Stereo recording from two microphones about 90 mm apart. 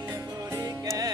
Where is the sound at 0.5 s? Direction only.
40° right (ahead or behind).